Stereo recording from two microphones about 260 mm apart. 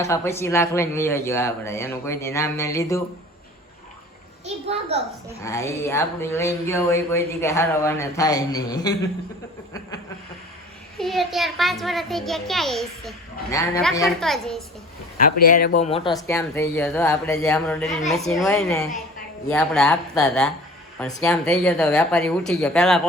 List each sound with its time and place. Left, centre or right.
0.0 s speech: centre
4.4 s a child's voice: right
5.4 s speech: centre
10.9 s a child's voice: centre
13.5 s speech: centre
14.2 s a child's voice: centre
15.2 s speech: left
16.2 s a child's voice: centre